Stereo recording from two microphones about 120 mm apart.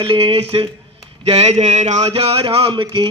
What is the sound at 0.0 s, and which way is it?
Speech, 45° right (ahead or behind).